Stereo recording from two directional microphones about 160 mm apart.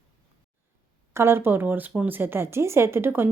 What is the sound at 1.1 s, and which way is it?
Speech, 15° right (ahead or behind).